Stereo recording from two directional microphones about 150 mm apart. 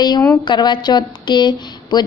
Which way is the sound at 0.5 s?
30° left (ahead or behind).